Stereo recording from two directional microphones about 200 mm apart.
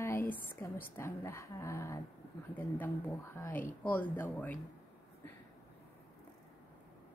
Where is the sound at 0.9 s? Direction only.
15° left (ahead or behind).